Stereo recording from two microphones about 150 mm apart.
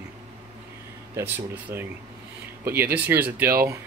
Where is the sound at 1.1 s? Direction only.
15° right (ahead or behind).